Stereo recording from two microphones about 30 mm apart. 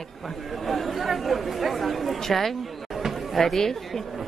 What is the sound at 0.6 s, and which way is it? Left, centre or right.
Speech, centre.